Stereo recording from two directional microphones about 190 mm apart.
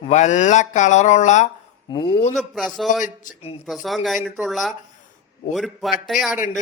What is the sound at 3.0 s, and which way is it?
Speech, 45° left (ahead or behind).